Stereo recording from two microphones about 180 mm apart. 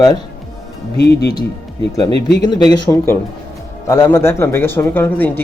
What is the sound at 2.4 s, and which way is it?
Speech, 25° left (ahead or behind).